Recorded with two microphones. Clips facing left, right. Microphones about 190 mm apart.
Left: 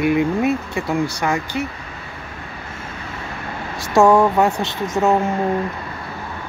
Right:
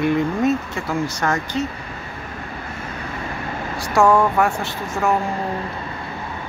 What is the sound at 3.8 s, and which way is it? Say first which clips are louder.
Speech: left 3 dB; 20° left (ahead or behind).